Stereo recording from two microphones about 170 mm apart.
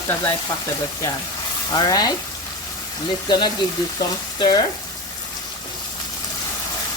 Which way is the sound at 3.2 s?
25° left (ahead or behind).